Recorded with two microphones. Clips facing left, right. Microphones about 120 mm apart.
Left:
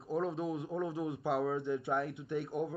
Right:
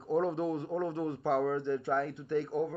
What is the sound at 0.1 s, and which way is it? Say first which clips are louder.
A man's voice: right 4 dB; centre (ahead or behind).